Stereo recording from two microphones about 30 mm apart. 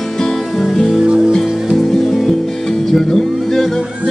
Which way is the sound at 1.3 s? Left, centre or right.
Centre.